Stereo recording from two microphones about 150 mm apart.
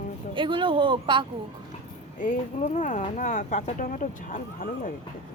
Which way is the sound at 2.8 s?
55° left (ahead or behind).